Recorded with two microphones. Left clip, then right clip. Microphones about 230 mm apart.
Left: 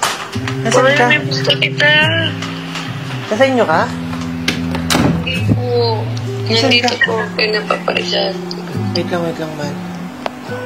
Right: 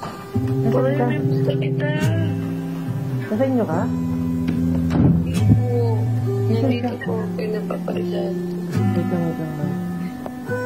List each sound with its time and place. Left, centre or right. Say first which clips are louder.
0.7 s speech: left 11 dB; centre
3.3 s speech: left 9 dB; centre
4.5 s music: left 11 dB; centre
6.5 s speech: left 13 dB; centre